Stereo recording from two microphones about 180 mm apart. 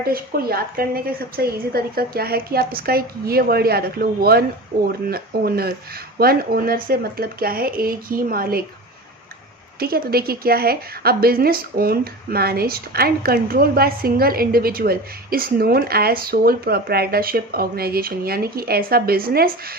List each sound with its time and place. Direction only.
0.0 s a woman's voice: 55° right (ahead or behind)
9.8 s a woman's voice: 55° right (ahead or behind)